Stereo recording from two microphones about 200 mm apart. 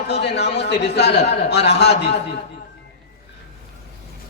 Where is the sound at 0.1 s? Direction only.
55° left (ahead or behind).